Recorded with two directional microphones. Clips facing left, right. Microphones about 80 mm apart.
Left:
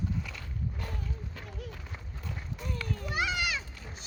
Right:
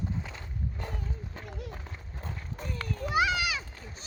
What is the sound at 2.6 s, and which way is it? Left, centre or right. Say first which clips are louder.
Children playing: right 2 dB; right.